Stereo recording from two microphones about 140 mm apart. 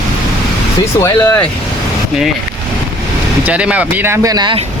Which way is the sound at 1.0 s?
20° left (ahead or behind).